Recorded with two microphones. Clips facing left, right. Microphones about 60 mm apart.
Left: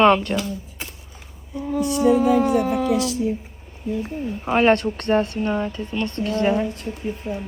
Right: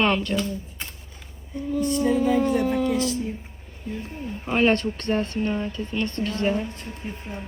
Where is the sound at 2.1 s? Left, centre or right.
Left.